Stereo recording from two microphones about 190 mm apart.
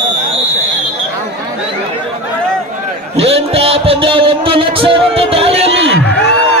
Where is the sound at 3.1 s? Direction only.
30° right (ahead or behind).